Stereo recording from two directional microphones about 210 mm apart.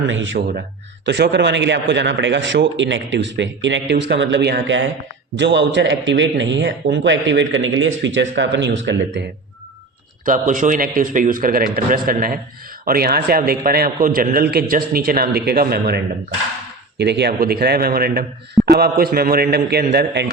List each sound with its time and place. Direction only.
0.1 s a man's voice: 65° right (ahead or behind)
10.2 s a man's voice: 40° right (ahead or behind)